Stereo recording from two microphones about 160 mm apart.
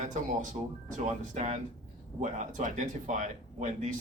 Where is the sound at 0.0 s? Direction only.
50° right (ahead or behind).